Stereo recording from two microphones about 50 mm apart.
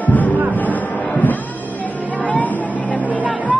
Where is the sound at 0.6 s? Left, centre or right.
Left.